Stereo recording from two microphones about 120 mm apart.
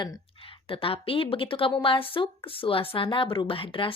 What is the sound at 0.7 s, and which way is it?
A woman's voice, 50° left (ahead or behind).